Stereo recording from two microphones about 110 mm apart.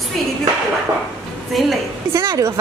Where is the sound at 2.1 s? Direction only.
30° right (ahead or behind).